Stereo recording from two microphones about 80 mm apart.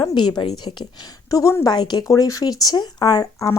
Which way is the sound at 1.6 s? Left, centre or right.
Left.